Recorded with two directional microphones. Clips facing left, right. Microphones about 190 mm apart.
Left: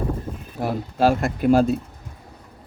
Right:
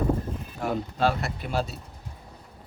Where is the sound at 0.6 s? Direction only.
40° left (ahead or behind).